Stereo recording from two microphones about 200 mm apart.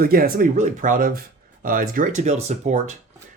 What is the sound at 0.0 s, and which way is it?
Speech, 45° right (ahead or behind).